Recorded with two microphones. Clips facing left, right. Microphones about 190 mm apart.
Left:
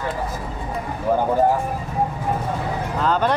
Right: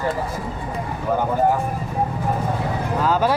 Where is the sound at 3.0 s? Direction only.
5° right (ahead or behind).